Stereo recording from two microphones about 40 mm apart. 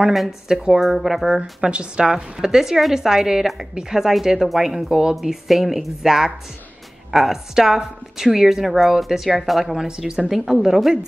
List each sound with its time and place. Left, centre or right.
0.5 s speech: centre
0.7 s a woman's voice: centre
1.4 s a woman's voice: right; by 11.0 s centre